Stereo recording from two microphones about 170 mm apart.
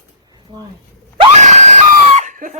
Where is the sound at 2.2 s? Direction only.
50° right (ahead or behind).